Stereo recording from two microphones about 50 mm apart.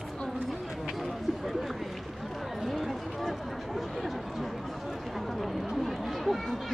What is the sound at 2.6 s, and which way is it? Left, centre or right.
Speech, centre.